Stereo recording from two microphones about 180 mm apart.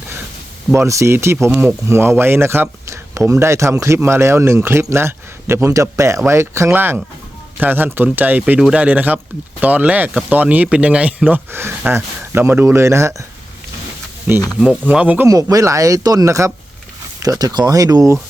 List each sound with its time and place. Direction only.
0.7 s speech: 15° right (ahead or behind)
14.3 s speech: 15° left (ahead or behind)
14.6 s speech: 5° right (ahead or behind)
15.3 s speech: 20° right (ahead or behind)